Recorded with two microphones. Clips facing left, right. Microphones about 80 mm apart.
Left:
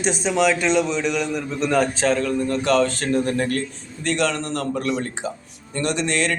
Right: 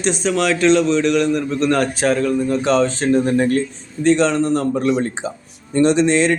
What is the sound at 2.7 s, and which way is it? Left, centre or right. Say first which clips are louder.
Speech: right 3 dB; right.